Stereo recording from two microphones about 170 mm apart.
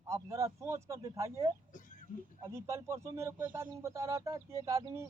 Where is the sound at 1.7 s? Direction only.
50° left (ahead or behind).